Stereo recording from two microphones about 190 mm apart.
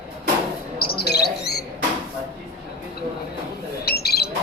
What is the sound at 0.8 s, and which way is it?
Insect, 55° left (ahead or behind).